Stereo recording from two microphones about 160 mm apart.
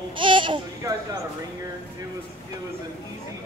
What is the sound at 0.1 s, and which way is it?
Babbling, 30° right (ahead or behind).